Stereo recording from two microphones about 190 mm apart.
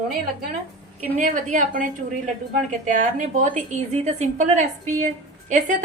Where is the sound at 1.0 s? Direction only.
40° right (ahead or behind).